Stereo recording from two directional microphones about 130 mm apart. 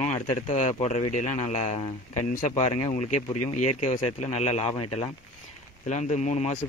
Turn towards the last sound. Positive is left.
turn(degrees=65)  # may be behind; listen again after turning